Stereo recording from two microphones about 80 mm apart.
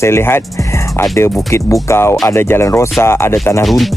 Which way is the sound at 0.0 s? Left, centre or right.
Left.